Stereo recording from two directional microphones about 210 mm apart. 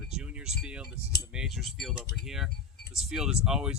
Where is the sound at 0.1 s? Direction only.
5° right (ahead or behind).